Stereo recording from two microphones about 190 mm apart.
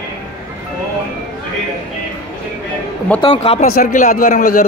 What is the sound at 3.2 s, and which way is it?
Speech, 30° left (ahead or behind).